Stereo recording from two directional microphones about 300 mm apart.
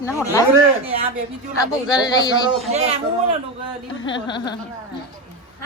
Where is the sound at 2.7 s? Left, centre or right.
Centre.